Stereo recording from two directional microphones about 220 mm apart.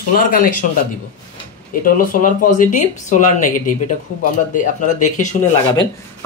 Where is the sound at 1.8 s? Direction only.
40° left (ahead or behind).